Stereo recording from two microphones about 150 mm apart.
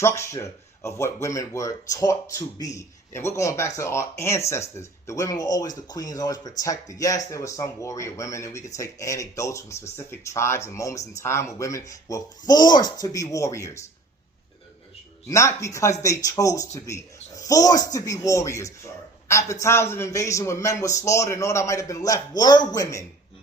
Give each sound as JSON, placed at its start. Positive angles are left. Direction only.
{"t": 0.0, "sound": "speech", "side_deg": 20}
{"t": 15.3, "sound": "speech", "side_deg": 20}